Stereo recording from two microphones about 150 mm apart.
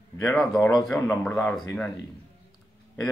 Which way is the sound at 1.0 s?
15° left (ahead or behind).